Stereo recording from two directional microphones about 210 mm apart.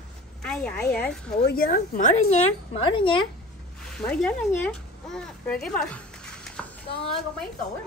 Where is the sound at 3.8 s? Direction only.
5° left (ahead or behind).